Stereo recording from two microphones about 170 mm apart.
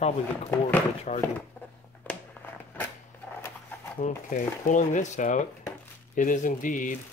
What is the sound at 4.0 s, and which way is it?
Speech, 50° left (ahead or behind).